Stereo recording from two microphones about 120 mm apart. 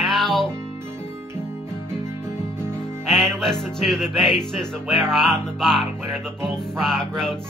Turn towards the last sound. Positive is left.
turn(degrees=5)  # may be behind; listen again after turning